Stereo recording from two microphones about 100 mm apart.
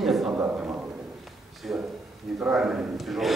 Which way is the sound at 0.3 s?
20° right (ahead or behind).